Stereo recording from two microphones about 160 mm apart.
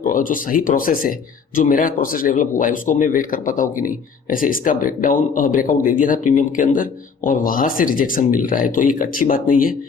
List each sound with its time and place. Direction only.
0.0 s speech: 60° left (ahead or behind)